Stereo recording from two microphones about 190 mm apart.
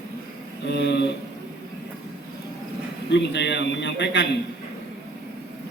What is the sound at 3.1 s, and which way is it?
A man's voice, 65° left (ahead or behind).